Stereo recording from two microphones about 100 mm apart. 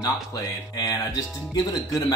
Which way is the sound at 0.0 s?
40° left (ahead or behind).